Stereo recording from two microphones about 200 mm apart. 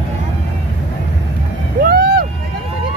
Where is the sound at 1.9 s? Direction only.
50° right (ahead or behind).